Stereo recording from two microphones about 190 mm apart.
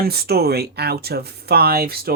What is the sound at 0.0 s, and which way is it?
Speech, 55° right (ahead or behind).